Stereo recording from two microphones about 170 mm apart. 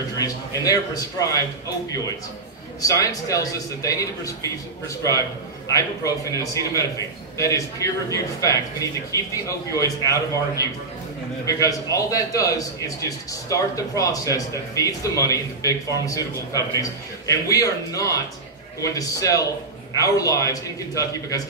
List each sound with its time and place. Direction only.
0.2 s a man's voice: 20° left (ahead or behind)
2.9 s a man's voice: 20° left (ahead or behind)